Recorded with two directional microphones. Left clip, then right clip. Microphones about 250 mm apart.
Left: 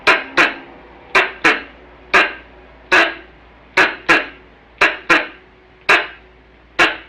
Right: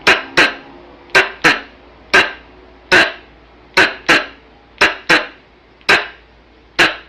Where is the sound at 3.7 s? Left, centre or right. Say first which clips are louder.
Right 1 dB; centre.